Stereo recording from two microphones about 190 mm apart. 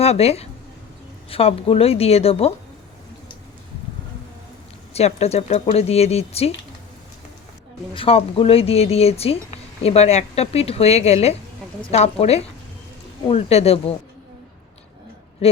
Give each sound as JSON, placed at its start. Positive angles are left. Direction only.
{"t": 0.0, "sound": "speech", "side_deg": 35}
{"t": 4.9, "sound": "speech", "side_deg": 35}
{"t": 7.9, "sound": "speech", "side_deg": 30}
{"t": 15.4, "sound": "a sound", "side_deg": 30}